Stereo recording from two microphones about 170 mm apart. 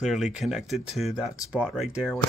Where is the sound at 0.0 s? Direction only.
5° right (ahead or behind).